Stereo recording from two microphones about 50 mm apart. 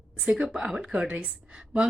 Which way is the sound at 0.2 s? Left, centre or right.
Centre.